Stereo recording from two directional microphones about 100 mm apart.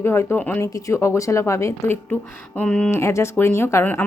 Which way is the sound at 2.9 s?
30° left (ahead or behind).